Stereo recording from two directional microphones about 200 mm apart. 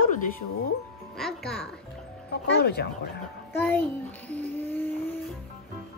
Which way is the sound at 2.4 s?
55° left (ahead or behind).